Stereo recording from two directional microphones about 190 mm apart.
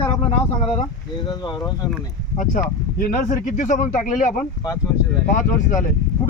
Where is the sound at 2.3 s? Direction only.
45° left (ahead or behind).